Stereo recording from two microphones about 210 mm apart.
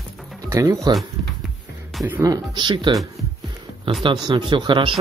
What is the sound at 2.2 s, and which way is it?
Speech, 15° right (ahead or behind).